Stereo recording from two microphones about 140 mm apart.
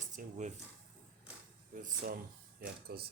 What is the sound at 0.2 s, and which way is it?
Speech, 80° right.